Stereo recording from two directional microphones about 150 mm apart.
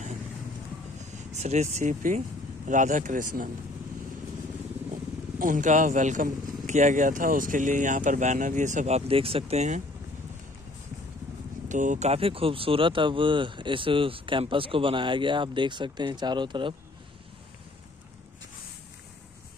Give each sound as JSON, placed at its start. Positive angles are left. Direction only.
{"t": 0.9, "sound": "speech", "side_deg": -50}
{"t": 4.9, "sound": "speech", "side_deg": -60}
{"t": 11.7, "sound": "speech", "side_deg": -55}